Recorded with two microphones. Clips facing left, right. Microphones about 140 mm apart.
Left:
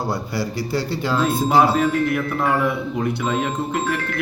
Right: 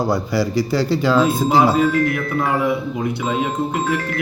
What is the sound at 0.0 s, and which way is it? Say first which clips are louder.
Speech: right 5 dB; 90° right.